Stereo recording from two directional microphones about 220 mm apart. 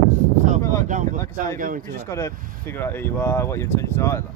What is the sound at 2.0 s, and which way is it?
Speech, 10° left (ahead or behind).